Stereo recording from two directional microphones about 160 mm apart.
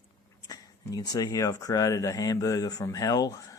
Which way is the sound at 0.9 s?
25° left (ahead or behind).